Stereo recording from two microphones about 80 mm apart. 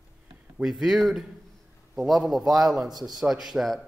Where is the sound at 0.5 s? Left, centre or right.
Centre.